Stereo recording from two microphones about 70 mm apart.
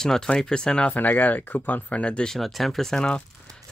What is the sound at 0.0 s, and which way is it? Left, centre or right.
Speech, centre.